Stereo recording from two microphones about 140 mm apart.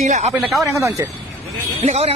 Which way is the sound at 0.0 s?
55° right (ahead or behind).